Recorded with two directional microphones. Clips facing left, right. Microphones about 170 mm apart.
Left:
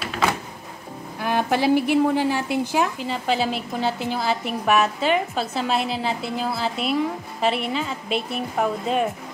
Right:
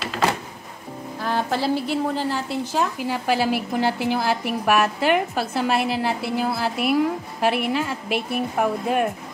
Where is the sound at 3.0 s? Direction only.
5° right (ahead or behind).